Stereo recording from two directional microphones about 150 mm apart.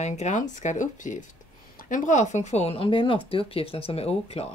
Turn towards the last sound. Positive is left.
turn(degrees=40)  # may be behind; listen again after turning